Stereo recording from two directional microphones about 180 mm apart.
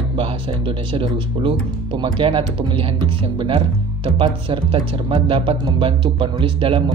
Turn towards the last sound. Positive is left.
turn(degrees=-30)  # may be behind; listen again after turning